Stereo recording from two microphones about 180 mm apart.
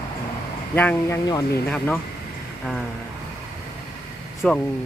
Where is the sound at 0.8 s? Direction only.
10° left (ahead or behind).